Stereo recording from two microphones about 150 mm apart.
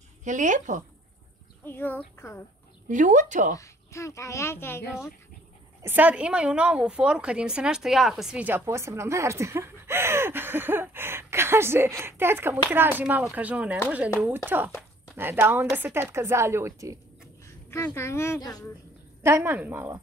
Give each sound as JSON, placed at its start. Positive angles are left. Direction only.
{"t": 0.2, "sound": "speech", "side_deg": -55}
{"t": 1.6, "sound": "speech", "side_deg": 15}
{"t": 2.9, "sound": "speech", "side_deg": -55}
{"t": 3.5, "sound": "speech", "side_deg": 20}
{"t": 5.8, "sound": "a woman's voice", "side_deg": -15}
{"t": 17.6, "sound": "speech", "side_deg": 15}
{"t": 19.2, "sound": "a woman's voice", "side_deg": -15}